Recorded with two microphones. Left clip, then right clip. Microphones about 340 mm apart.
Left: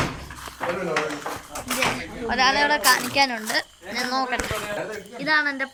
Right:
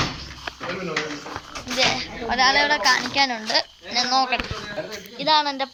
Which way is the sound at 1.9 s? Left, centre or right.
Centre.